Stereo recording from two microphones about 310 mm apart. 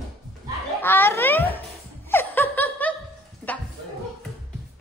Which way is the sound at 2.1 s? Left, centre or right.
Centre.